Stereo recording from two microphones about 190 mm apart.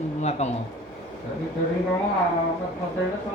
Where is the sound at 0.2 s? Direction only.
35° left (ahead or behind).